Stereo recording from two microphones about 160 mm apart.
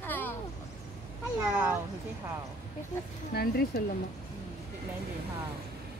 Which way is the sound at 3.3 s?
80° left.